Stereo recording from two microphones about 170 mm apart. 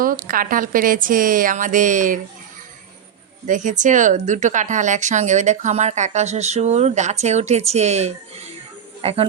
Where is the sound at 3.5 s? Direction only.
45° right (ahead or behind).